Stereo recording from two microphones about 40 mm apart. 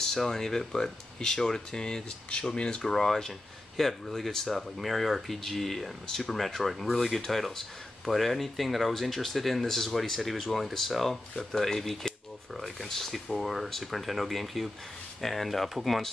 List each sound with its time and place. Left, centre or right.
0.0 s speech: centre
2.8 s speech: centre